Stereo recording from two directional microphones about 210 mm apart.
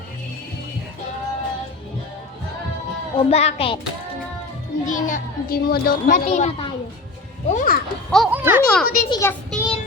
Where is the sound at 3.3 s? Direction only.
30° left (ahead or behind).